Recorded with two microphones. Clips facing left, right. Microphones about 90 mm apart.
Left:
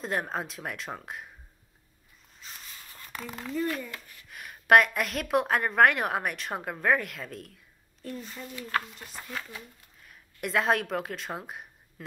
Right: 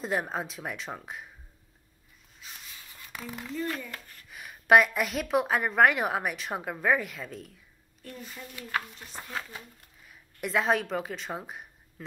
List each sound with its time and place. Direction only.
0.0 s a woman's voice: centre (ahead or behind)
2.4 s a sound: 5° right (ahead or behind)
3.3 s a woman's voice: centre (ahead or behind)
3.9 s speech: 40° right (ahead or behind)
4.3 s a woman's voice: centre (ahead or behind)
9.1 s speech: 25° right (ahead or behind)
10.4 s a woman's voice: centre (ahead or behind)